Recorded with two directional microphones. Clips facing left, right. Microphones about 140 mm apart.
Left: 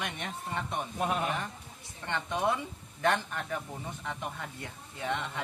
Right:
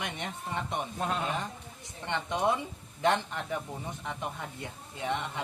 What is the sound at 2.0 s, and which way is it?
A man's voice, 20° right (ahead or behind).